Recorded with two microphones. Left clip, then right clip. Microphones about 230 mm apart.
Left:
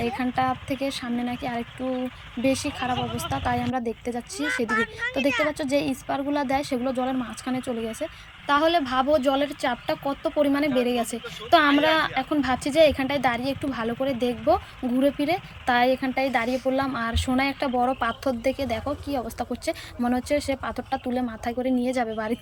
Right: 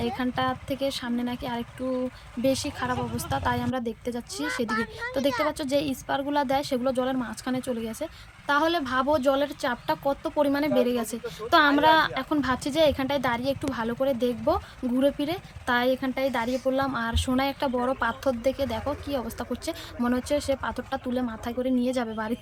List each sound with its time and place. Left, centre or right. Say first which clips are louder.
0.0 s a woman's voice: left 3 dB; centre
4.7 s speech: left 4 dB; centre
5.5 s a woman's voice: left 2 dB; centre